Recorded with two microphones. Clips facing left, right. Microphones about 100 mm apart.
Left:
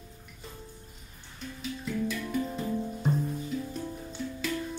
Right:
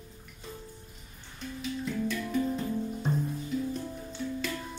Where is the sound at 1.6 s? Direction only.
Centre (ahead or behind).